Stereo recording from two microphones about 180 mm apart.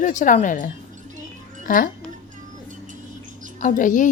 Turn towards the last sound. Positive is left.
turn(degrees=45)  # may be behind; listen again after turning